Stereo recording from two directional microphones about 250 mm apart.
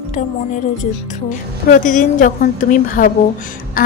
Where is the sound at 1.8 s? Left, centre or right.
Left.